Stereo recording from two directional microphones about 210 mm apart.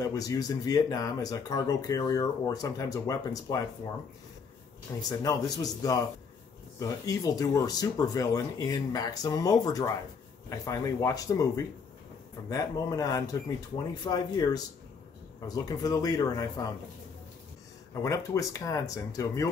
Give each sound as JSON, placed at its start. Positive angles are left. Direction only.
{"t": 0.0, "sound": "speech", "side_deg": 15}
{"t": 4.9, "sound": "speech", "side_deg": 15}
{"t": 18.0, "sound": "speech", "side_deg": 15}